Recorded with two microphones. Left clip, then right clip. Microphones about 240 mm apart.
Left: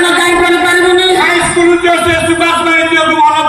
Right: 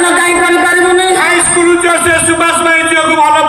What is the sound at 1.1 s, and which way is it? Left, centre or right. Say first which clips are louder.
Music: even; centre.